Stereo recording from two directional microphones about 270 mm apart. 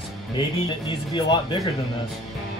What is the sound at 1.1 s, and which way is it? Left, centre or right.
Speech, centre.